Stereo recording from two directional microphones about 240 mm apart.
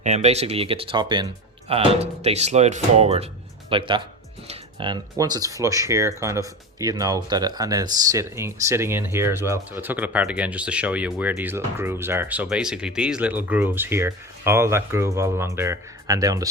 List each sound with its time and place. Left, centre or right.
0.0 s speech: right